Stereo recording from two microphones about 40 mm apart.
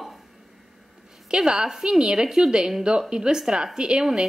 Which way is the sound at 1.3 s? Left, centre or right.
Centre.